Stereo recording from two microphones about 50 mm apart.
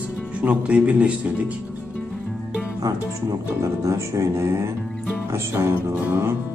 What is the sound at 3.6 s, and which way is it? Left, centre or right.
Speech, right.